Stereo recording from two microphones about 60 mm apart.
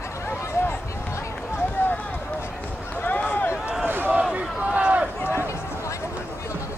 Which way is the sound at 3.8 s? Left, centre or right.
Right.